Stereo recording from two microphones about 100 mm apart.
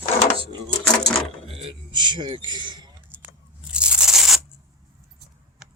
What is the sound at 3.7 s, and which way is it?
Crunch, 10° right (ahead or behind).